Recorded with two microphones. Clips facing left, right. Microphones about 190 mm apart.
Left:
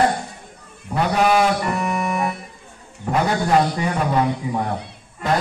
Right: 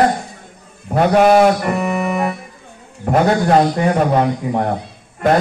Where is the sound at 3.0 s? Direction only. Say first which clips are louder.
Right 6 dB; 50° right (ahead or behind).